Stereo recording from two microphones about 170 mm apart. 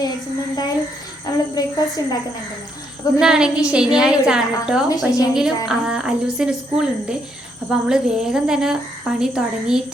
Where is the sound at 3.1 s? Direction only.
5° right (ahead or behind).